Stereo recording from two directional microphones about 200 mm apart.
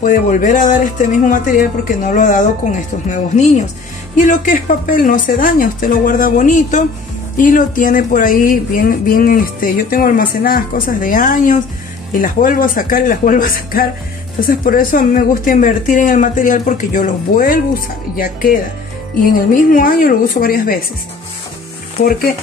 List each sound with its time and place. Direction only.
0.0 s a woman's voice: 40° left (ahead or behind)